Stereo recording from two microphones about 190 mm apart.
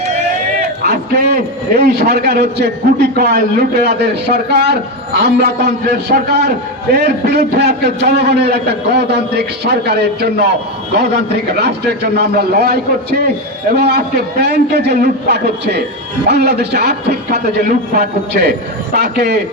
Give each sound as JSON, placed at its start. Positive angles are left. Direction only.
{"t": 0.8, "sound": "a man's voice", "side_deg": -55}
{"t": 11.5, "sound": "a man's voice", "side_deg": -60}